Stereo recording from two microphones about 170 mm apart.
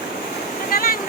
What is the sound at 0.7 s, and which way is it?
Vehicle, 55° left (ahead or behind).